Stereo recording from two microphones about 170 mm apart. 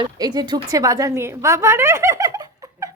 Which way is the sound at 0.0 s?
25° right (ahead or behind).